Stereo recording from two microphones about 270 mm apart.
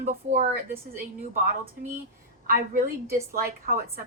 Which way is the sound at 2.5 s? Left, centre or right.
Right.